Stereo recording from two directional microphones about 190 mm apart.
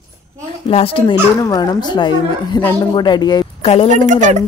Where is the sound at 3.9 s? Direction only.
40° right (ahead or behind).